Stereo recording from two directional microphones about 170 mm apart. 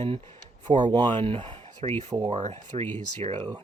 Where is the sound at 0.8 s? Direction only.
30° right (ahead or behind).